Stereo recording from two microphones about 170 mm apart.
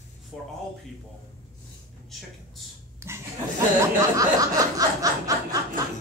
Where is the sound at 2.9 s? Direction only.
15° right (ahead or behind).